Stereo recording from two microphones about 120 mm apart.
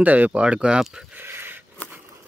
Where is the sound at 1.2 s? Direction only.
20° right (ahead or behind).